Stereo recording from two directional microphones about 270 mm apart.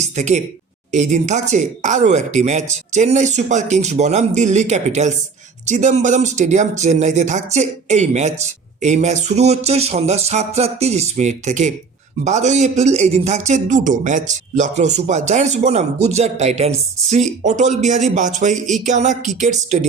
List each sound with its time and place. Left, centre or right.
0.0 s a man's voice: right